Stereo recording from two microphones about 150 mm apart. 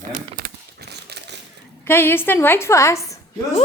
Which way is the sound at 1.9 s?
15° left (ahead or behind).